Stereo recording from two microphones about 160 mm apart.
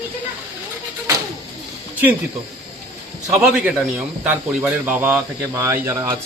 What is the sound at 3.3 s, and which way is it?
A man's voice, 10° right (ahead or behind).